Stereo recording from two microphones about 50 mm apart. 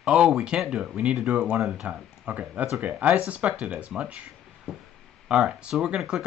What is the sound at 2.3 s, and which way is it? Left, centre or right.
Speech, right.